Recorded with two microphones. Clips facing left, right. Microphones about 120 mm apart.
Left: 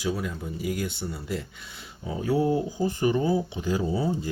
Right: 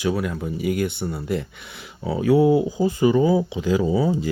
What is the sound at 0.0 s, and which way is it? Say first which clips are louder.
Speech: right 6 dB; 65° right (ahead or behind).